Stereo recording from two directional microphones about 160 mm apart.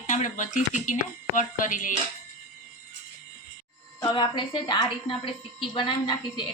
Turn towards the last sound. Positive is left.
turn(degrees=30)  # may be behind; listen again after turning